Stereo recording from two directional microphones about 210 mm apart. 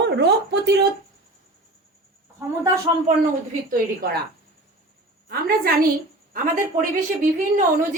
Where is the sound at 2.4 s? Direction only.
15° right (ahead or behind).